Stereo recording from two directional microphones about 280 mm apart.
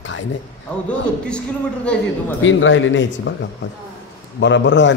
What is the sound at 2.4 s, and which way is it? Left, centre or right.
A man's voice, left.